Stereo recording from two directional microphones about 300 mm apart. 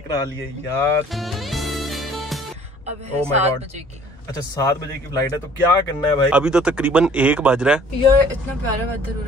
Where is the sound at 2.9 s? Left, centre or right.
Right.